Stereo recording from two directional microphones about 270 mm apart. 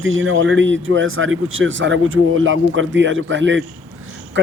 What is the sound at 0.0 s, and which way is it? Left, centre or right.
Speech, right.